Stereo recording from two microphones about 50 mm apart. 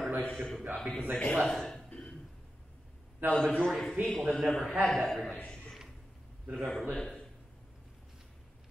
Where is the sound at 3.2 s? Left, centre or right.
Right.